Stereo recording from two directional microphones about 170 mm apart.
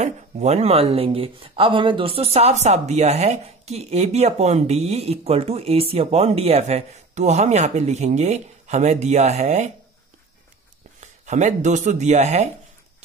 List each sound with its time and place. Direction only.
0.0 s speech: 40° right (ahead or behind)
11.0 s speech: 45° right (ahead or behind)